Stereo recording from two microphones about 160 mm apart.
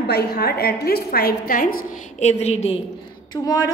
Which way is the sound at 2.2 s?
45° left (ahead or behind).